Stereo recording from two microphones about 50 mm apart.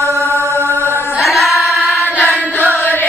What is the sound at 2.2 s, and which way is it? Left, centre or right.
Chant, left.